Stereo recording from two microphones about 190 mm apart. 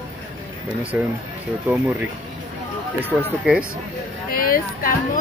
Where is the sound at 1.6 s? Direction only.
10° right (ahead or behind).